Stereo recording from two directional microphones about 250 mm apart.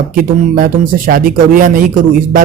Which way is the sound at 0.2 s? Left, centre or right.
Right.